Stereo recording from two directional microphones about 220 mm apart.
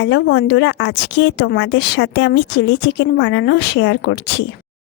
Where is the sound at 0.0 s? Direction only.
50° left (ahead or behind).